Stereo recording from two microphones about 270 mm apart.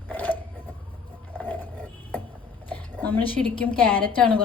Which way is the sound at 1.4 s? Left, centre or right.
Centre.